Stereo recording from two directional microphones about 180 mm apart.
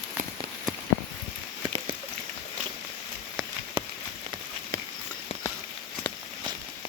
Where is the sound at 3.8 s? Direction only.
25° right (ahead or behind).